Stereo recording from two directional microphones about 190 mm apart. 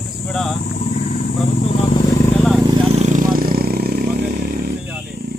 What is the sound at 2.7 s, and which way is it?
Vehicle, 35° right (ahead or behind).